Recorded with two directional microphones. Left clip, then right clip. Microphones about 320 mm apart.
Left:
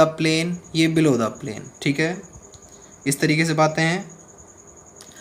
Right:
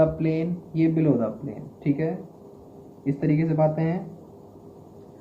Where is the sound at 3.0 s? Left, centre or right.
Left.